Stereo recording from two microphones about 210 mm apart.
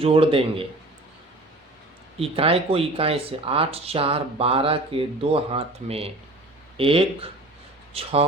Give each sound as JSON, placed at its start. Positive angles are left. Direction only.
{"t": 0.0, "sound": "speech", "side_deg": -25}
{"t": 2.1, "sound": "speech", "side_deg": -25}